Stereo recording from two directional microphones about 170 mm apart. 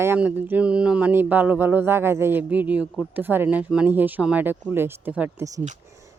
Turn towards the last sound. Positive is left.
turn(degrees=-15)  # may be behind; listen again after turning